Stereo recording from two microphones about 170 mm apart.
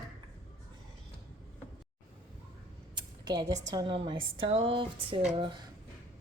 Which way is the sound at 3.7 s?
25° right (ahead or behind).